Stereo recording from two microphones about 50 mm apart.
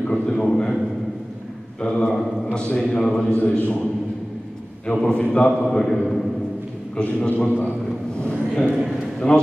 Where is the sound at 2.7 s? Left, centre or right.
Left.